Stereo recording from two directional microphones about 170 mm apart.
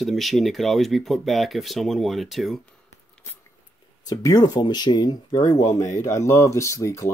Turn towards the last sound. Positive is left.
turn(degrees=20)  # may be behind; listen again after turning